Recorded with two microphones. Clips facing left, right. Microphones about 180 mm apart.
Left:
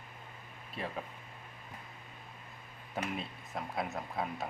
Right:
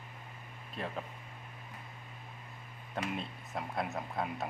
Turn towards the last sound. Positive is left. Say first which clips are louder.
# right 1 dB
turn(degrees=0)  # may be behind; listen again after turning